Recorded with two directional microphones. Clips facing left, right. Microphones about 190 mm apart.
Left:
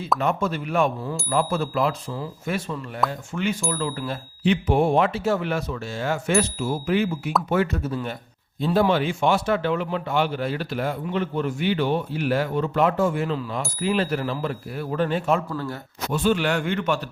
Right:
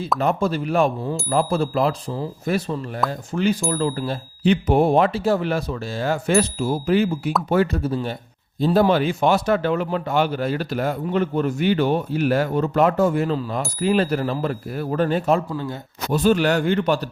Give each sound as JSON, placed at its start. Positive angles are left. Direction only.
{"t": 0.2, "sound": "a man's voice", "side_deg": -35}